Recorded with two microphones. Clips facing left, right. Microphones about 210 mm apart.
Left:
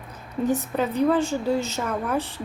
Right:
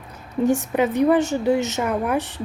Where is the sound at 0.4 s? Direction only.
75° right (ahead or behind).